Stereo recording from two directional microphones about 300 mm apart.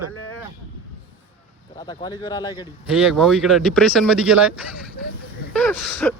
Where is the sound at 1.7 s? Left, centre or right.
Centre.